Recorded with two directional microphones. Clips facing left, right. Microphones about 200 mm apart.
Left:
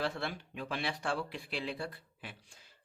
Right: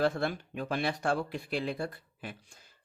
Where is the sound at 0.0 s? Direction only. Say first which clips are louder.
Right 7 dB; 45° right (ahead or behind).